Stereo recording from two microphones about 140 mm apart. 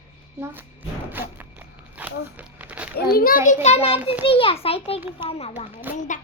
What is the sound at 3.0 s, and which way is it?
A child's voice, 90° left.